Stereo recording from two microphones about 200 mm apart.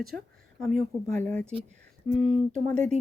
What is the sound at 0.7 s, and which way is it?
Speech, 35° right (ahead or behind).